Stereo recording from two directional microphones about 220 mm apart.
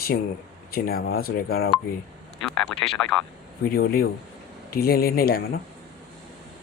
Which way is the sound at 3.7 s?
45° left (ahead or behind).